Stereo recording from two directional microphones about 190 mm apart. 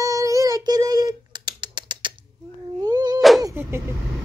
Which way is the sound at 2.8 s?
20° right (ahead or behind).